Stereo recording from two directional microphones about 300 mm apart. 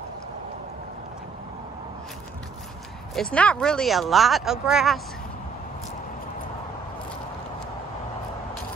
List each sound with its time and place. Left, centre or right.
3.2 s speech: centre